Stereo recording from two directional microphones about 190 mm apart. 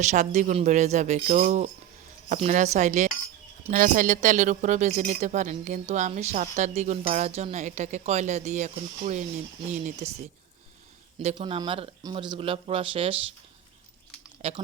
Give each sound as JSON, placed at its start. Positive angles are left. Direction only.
{"t": 0.0, "sound": "speech", "side_deg": -40}
{"t": 11.3, "sound": "speech", "side_deg": -25}
{"t": 14.4, "sound": "speech", "side_deg": -30}